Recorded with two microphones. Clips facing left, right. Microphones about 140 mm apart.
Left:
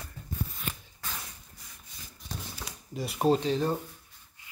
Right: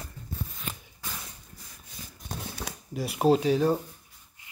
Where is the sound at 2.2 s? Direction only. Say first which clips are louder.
Right 3 dB; 60° right (ahead or behind).